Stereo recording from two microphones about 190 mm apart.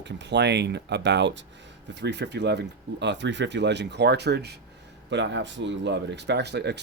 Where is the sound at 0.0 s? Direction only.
65° right (ahead or behind).